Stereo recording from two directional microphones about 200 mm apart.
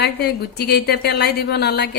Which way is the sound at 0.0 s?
55° left (ahead or behind).